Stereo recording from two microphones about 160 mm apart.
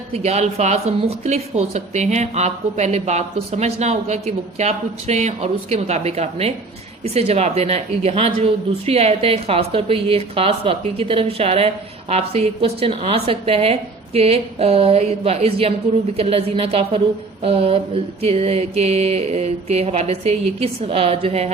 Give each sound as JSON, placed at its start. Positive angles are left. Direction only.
{"t": 0.1, "sound": "a woman's voice", "side_deg": -40}